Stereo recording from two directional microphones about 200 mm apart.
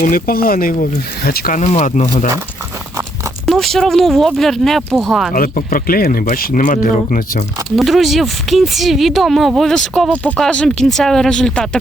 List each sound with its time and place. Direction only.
0.0 s speech: 45° left (ahead or behind)
3.4 s speech: centre (ahead or behind)
5.3 s speech: 45° left (ahead or behind)
7.8 s speech: centre (ahead or behind)